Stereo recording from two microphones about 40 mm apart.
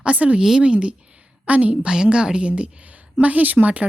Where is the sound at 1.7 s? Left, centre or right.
Centre.